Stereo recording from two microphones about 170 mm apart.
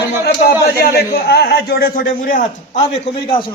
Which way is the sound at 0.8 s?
70° left (ahead or behind).